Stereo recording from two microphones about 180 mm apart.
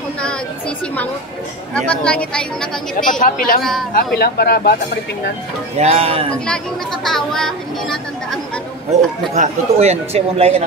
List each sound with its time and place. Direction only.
1.7 s speech: 5° left (ahead or behind)
3.0 s a woman's voice: 45° left (ahead or behind)
5.8 s speech: 35° right (ahead or behind)
6.3 s speech: 5° left (ahead or behind)
9.3 s speech: 40° right (ahead or behind)